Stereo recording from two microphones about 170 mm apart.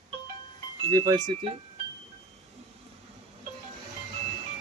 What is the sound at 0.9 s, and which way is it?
Speech, 25° right (ahead or behind).